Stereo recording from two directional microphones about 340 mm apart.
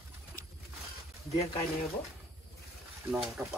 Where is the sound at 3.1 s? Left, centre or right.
Centre.